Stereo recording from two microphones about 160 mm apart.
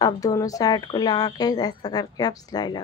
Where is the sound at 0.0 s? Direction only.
20° left (ahead or behind).